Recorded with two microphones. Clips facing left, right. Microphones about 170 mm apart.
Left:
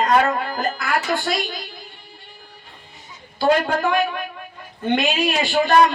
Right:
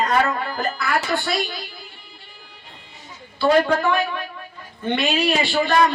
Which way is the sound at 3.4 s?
45° left (ahead or behind).